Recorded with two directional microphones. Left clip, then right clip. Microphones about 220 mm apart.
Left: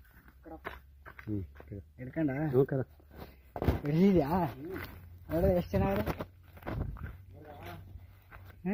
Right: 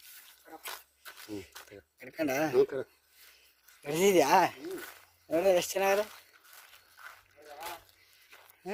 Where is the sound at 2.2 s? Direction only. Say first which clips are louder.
Right 5 dB; 40° right (ahead or behind).